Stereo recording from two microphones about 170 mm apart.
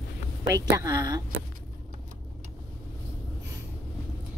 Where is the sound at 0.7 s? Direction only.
25° right (ahead or behind).